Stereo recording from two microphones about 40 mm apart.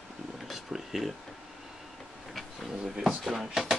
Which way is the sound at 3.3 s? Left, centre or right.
Centre.